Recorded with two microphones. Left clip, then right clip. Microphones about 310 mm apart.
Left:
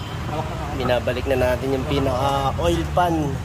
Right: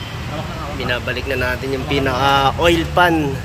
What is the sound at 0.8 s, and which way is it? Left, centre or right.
Speech, centre.